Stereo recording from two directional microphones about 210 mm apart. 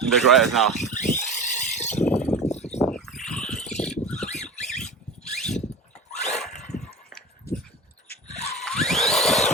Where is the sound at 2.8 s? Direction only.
Centre (ahead or behind).